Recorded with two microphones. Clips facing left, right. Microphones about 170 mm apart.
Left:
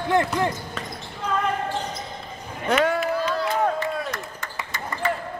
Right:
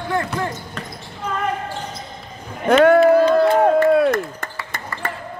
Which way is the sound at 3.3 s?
55° right (ahead or behind).